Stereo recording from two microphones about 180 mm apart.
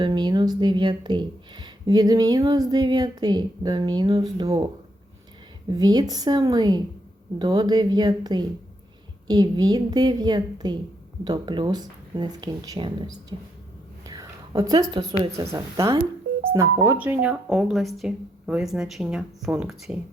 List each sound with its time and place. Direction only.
0.0 s speech: 25° right (ahead or behind)
14.1 s a sound: 20° right (ahead or behind)
15.2 s speech: 20° right (ahead or behind); by 19.7 s 5° right (ahead or behind)